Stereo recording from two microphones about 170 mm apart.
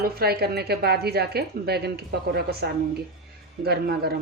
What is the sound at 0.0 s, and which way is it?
A woman's voice, 65° right (ahead or behind).